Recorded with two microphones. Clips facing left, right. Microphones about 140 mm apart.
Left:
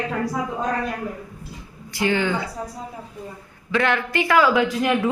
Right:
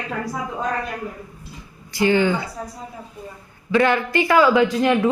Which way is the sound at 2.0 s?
Centre (ahead or behind).